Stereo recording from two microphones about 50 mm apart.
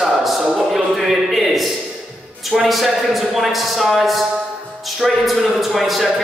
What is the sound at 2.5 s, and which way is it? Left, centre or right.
A man's voice, centre.